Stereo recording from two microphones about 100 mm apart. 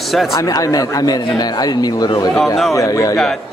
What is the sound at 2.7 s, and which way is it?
Speech, 35° left (ahead or behind).